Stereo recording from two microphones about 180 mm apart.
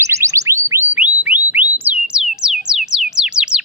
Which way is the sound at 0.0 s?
15° right (ahead or behind).